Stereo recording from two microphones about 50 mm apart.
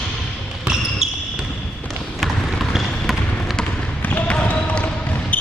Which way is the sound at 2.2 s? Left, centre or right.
Centre.